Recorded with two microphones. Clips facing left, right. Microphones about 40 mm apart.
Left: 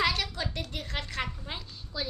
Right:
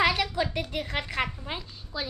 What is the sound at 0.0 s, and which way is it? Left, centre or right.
A woman's voice, centre.